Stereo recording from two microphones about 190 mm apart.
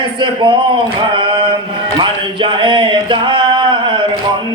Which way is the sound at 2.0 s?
25° right (ahead or behind).